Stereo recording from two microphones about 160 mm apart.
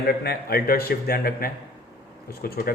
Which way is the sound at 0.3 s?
70° left (ahead or behind).